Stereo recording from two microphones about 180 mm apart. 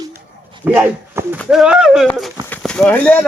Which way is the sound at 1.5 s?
5° right (ahead or behind).